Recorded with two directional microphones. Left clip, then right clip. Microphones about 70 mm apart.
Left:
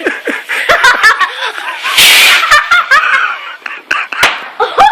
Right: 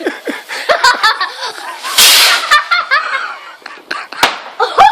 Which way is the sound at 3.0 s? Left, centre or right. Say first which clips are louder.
Left 8 dB; centre.